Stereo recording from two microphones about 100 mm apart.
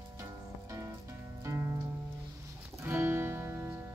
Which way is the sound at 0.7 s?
35° right (ahead or behind).